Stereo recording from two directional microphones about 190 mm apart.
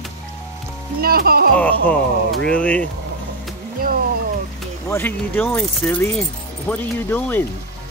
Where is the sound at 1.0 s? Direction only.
55° right (ahead or behind).